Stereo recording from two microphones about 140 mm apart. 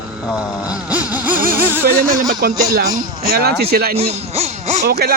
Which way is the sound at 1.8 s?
90° right.